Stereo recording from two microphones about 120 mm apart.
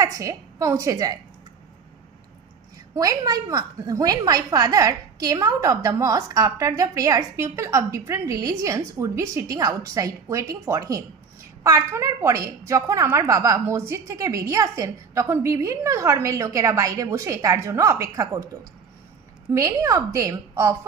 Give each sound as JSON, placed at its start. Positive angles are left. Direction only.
{"t": 0.0, "sound": "a woman's voice", "side_deg": -25}
{"t": 2.9, "sound": "a woman's voice", "side_deg": -30}